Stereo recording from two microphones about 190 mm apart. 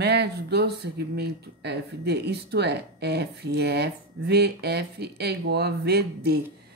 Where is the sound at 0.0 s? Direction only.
60° right (ahead or behind).